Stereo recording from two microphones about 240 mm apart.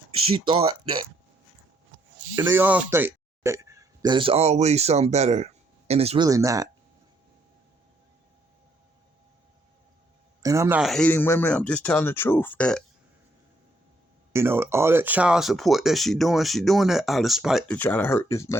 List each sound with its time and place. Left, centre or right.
0.3 s speech: right
2.3 s speech: centre
10.4 s speech: centre
14.3 s speech: centre